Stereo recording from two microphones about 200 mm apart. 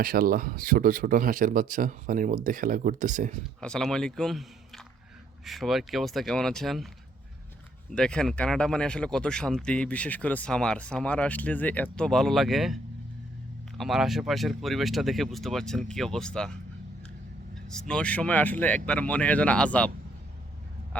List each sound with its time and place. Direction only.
0.0 s speech: 45° right (ahead or behind)
3.6 s speech: 5° left (ahead or behind)
7.9 s speech: 5° left (ahead or behind)
17.7 s speech: 5° left (ahead or behind)